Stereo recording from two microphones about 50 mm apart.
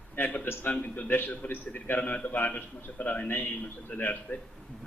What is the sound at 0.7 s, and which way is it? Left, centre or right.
Speech, left.